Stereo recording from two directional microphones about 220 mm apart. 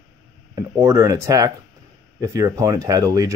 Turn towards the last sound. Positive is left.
turn(degrees=-15)  # may be behind; listen again after turning